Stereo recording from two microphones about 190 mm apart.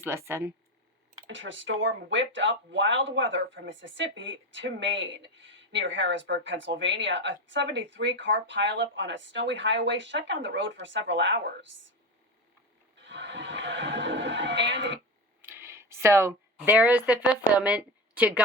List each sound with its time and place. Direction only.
0.0 s speech: 15° right (ahead or behind)
1.3 s speech: 80° right
13.1 s a sound: 70° right (ahead or behind)
15.4 s speech: 10° right (ahead or behind)